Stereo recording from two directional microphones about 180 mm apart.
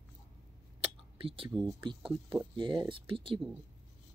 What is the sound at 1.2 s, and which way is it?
Speech, 30° right (ahead or behind).